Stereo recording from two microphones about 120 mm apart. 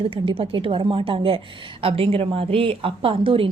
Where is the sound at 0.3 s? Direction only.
45° right (ahead or behind).